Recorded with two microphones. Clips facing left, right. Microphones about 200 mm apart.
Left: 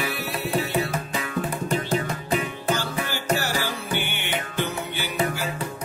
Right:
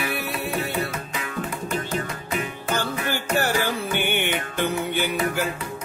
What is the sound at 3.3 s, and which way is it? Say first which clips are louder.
Music: right 3 dB; 55° right (ahead or behind).